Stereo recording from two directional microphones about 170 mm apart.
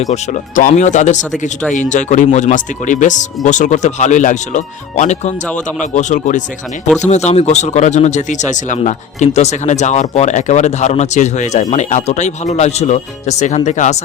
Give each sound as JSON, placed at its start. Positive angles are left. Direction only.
{"t": 0.1, "sound": "speech", "side_deg": 50}